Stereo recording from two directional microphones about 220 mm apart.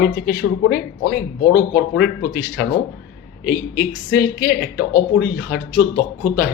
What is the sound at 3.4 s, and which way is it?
Speech, 40° left (ahead or behind).